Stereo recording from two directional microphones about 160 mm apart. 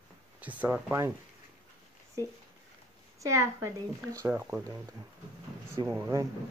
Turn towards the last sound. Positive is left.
turn(degrees=-20)  # may be behind; listen again after turning